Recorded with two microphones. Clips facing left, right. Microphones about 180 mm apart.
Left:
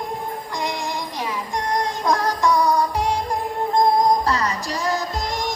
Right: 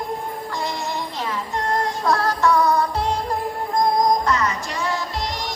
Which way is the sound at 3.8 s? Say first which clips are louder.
Left 1 dB; 35° left (ahead or behind).